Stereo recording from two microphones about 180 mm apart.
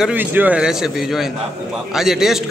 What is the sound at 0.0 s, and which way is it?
A man's voice, 10° right (ahead or behind).